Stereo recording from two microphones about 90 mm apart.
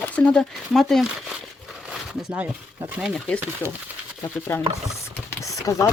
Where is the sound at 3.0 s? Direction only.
5° right (ahead or behind).